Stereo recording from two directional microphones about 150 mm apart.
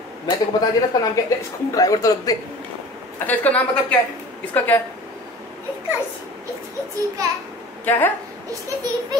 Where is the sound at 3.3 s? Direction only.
10° left (ahead or behind).